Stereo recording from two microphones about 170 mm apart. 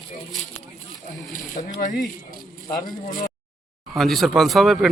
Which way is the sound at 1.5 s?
50° left (ahead or behind).